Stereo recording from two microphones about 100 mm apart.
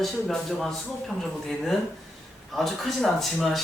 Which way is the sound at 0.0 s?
Centre (ahead or behind).